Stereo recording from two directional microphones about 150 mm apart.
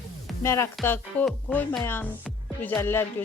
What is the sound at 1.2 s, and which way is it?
Speech, 5° left (ahead or behind).